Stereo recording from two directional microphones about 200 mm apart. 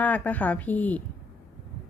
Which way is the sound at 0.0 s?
5° left (ahead or behind).